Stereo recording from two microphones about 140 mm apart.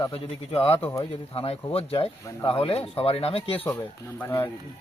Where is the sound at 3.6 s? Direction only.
15° left (ahead or behind).